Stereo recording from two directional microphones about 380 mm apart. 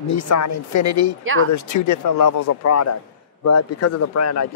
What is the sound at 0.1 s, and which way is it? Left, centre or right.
Speech, left.